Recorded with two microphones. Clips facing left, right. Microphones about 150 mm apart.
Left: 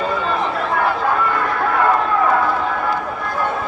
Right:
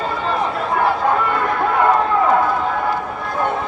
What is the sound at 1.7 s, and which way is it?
Run, 20° right (ahead or behind).